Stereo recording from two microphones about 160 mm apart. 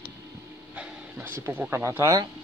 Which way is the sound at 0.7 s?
10° right (ahead or behind).